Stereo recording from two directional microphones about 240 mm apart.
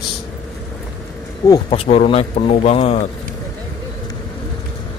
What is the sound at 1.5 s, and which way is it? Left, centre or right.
A man's voice, left.